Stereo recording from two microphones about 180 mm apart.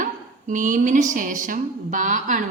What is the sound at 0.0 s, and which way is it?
A woman's voice, 45° right (ahead or behind).